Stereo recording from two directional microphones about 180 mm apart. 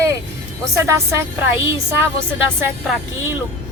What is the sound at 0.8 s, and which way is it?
Speech, 15° right (ahead or behind).